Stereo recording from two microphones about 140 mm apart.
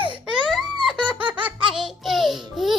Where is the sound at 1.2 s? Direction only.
35° right (ahead or behind).